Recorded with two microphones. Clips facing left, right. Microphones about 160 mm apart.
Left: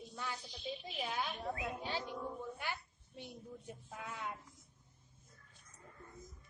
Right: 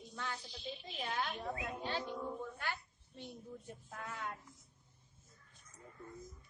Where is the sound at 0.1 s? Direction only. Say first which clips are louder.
Right 1 dB; 5° left (ahead or behind).